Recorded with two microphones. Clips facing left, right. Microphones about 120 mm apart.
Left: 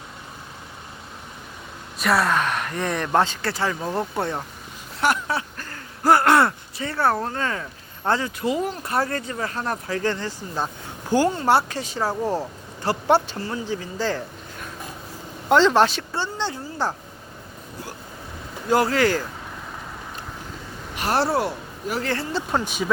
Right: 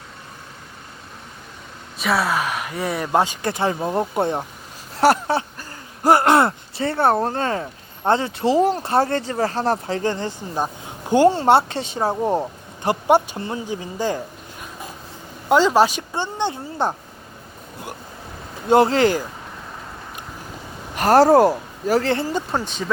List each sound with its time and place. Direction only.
2.0 s speech: centre (ahead or behind); by 4.4 s 20° right (ahead or behind)
4.9 s a sound: 35° right (ahead or behind)
5.5 s speech: 20° right (ahead or behind)
15.4 s speech: 10° right (ahead or behind)
18.7 s speech: 25° right (ahead or behind)
20.9 s a woman's voice: 45° right (ahead or behind)
22.4 s speech: 5° left (ahead or behind)